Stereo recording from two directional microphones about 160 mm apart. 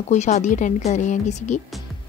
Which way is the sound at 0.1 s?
45° left (ahead or behind).